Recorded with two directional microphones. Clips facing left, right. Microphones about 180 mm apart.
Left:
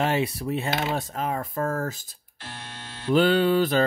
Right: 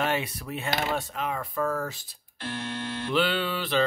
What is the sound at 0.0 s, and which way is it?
Speech, 35° left (ahead or behind).